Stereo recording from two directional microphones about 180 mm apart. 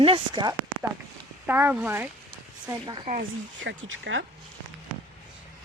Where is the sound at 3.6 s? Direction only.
90° right.